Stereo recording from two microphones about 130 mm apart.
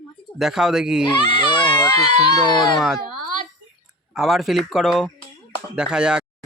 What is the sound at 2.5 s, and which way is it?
Speech, 35° left (ahead or behind).